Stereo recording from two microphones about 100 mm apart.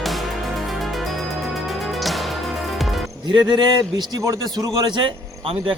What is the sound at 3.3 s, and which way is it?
Speech, 50° right (ahead or behind).